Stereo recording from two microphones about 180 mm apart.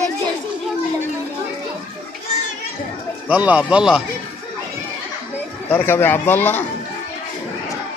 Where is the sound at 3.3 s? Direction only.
5° right (ahead or behind).